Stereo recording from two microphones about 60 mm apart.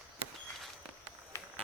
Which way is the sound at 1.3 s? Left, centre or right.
Left.